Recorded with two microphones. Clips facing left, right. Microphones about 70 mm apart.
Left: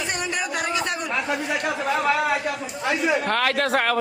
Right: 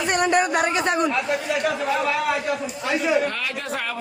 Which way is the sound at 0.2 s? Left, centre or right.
Right.